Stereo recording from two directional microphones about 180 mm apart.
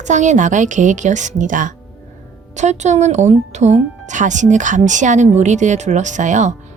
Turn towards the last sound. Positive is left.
turn(degrees=-40)  # may be behind; listen again after turning